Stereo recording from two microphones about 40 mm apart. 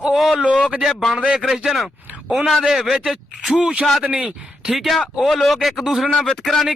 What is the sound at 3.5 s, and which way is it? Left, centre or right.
Speech, right.